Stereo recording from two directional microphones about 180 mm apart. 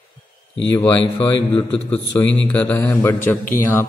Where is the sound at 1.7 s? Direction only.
10° left (ahead or behind).